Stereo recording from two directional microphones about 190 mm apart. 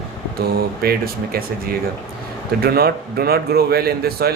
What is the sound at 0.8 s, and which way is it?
A man's voice, 50° right (ahead or behind).